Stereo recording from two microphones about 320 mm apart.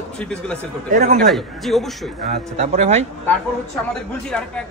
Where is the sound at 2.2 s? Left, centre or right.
Right.